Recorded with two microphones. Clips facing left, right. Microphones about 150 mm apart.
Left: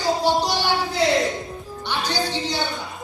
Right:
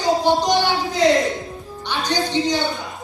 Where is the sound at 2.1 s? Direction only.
15° right (ahead or behind).